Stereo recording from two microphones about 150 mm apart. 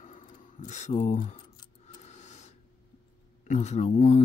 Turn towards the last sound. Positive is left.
turn(degrees=50)  # may be behind; listen again after turning